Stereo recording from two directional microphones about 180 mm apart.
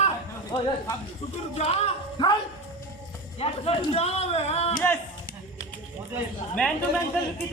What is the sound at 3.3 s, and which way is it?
A man's voice, 30° left (ahead or behind).